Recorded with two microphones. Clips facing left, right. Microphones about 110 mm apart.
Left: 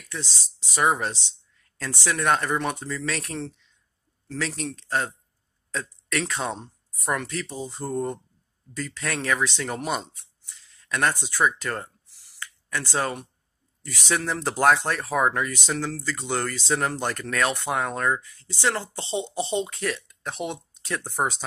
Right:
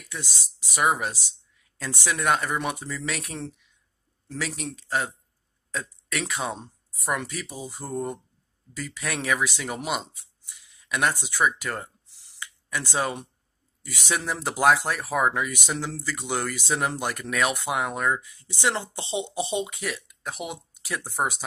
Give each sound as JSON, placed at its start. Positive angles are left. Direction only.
{"t": 0.1, "sound": "speech", "side_deg": -15}
{"t": 12.1, "sound": "a sound", "side_deg": -20}
{"t": 13.8, "sound": "speech", "side_deg": -15}